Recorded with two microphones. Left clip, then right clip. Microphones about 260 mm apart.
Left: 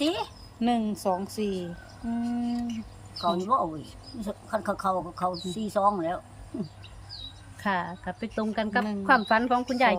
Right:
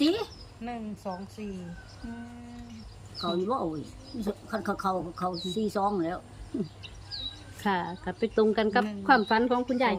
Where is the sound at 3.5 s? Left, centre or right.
Centre.